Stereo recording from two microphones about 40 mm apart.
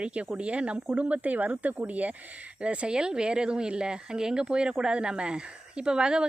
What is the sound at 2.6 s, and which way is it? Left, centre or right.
A woman's voice, right.